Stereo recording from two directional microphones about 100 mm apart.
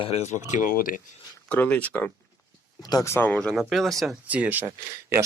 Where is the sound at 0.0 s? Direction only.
90° left.